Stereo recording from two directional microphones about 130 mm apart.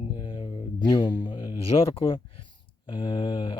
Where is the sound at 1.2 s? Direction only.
40° left (ahead or behind).